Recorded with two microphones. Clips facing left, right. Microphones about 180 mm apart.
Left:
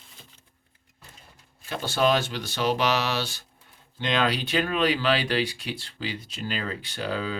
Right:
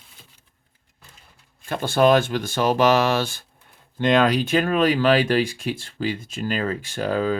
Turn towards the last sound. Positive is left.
turn(degrees=-45)  # may be behind; listen again after turning